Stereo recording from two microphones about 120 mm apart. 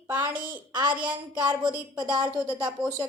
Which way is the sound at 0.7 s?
40° right (ahead or behind).